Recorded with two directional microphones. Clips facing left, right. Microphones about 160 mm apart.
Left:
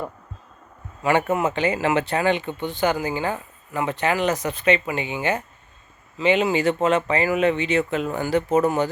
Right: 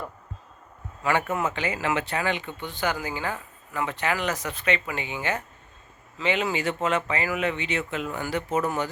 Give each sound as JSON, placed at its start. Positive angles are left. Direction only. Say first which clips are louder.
{"t": 1.0, "sound": "speech", "louder": "left 5 dB", "side_deg": 20}
{"t": 6.5, "sound": "speech", "louder": "left 6 dB", "side_deg": 30}